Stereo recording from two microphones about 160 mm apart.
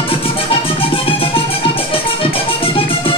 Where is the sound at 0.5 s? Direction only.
35° left (ahead or behind).